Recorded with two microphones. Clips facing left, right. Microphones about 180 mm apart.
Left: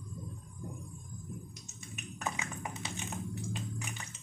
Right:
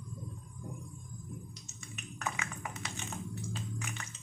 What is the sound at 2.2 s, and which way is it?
Music, 25° left (ahead or behind).